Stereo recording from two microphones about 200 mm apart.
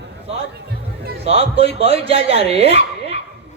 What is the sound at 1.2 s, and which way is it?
Speech, 30° right (ahead or behind).